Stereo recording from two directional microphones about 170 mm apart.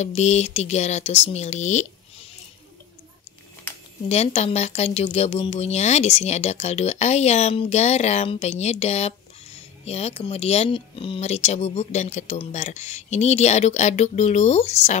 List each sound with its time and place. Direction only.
0.0 s speech: 40° left (ahead or behind)
4.1 s speech: 40° left (ahead or behind)